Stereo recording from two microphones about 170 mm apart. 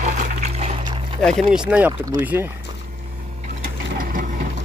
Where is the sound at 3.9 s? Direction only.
55° right (ahead or behind).